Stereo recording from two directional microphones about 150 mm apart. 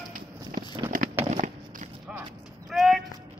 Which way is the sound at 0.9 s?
65° right (ahead or behind).